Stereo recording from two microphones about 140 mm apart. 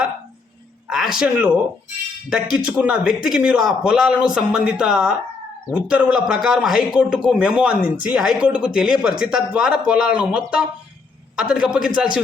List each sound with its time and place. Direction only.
0.9 s speech: 5° right (ahead or behind)
2.6 s a man's voice: 5° right (ahead or behind)